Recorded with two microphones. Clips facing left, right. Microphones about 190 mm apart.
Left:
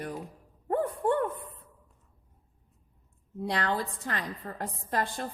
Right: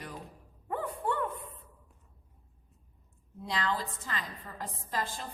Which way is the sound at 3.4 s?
60° left (ahead or behind).